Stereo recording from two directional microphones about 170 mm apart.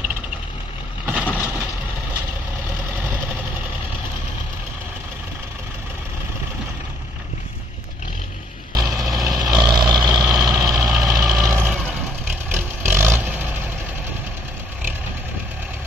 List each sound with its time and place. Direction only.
1.2 s vehicle: 15° left (ahead or behind)
8.7 s vehicle: 20° right (ahead or behind)